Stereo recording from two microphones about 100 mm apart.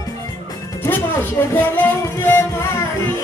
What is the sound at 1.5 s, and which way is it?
Music, 20° left (ahead or behind).